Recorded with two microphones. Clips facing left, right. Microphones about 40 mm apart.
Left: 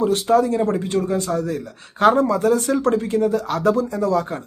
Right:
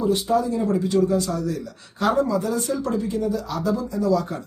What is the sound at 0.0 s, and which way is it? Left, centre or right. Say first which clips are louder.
Speech: left 4 dB; left.